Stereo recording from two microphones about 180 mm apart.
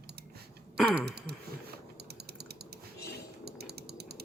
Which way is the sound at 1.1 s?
65° right (ahead or behind).